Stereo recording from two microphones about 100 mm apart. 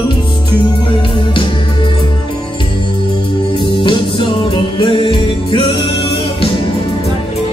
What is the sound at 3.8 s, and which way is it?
Music, 60° left (ahead or behind).